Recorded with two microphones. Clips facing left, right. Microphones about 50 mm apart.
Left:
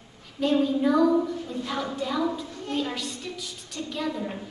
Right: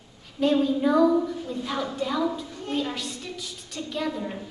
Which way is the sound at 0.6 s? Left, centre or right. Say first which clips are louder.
Even; centre.